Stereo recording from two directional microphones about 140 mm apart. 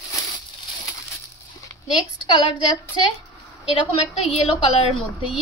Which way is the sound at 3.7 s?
45° left (ahead or behind).